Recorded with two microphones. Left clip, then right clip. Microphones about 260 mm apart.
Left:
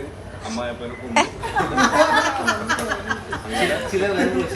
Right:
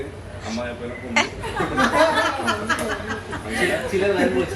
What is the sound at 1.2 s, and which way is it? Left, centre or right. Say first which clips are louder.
Speech: left 2 dB; centre.